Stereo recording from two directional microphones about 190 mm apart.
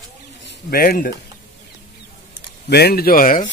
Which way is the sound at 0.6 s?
50° left (ahead or behind).